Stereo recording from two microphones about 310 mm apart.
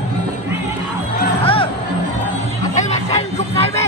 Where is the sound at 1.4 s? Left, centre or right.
Centre.